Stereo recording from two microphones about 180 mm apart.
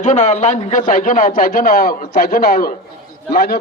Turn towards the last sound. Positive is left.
turn(degrees=60)  # may be behind; listen again after turning